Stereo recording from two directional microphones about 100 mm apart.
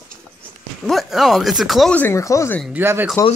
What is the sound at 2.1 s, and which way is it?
Speech, 30° left (ahead or behind).